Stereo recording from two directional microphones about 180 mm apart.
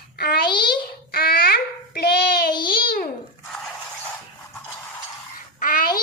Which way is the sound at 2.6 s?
55° left (ahead or behind).